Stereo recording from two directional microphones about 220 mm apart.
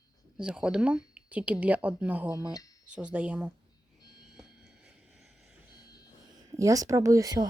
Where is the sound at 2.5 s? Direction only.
15° left (ahead or behind).